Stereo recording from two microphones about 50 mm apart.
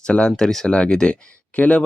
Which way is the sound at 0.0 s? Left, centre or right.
Centre.